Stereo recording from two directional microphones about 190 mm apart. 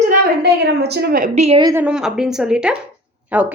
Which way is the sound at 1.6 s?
20° right (ahead or behind).